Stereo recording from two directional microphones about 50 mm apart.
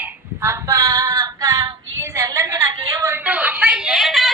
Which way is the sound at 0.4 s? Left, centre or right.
Right.